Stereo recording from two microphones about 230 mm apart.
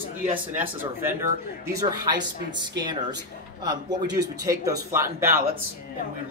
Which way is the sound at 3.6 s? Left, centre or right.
Centre.